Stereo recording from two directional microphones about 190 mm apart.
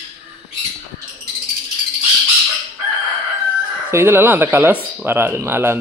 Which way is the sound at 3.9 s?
10° right (ahead or behind).